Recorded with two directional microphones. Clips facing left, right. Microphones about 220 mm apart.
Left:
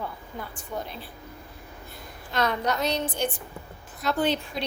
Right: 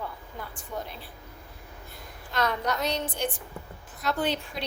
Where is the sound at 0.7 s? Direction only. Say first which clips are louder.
Left 2 dB; 20° left (ahead or behind).